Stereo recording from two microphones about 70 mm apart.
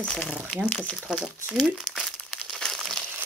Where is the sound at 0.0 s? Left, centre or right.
Centre.